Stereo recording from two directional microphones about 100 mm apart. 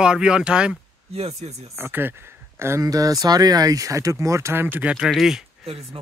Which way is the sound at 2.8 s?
35° right (ahead or behind).